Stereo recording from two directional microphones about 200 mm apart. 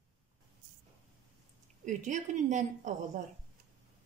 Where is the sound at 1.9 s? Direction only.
40° right (ahead or behind).